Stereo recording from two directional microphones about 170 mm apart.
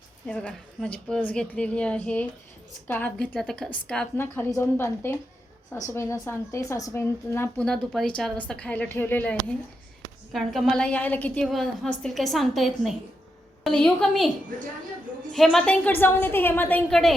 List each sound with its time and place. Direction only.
0.3 s a woman's voice: 5° left (ahead or behind)
15.3 s speech: centre (ahead or behind)